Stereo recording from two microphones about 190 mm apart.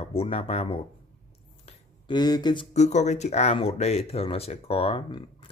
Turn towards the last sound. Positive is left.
turn(degrees=30)  # may be behind; listen again after turning